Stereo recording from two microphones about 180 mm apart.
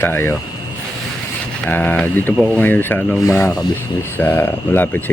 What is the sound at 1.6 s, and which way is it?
Speech, 10° left (ahead or behind).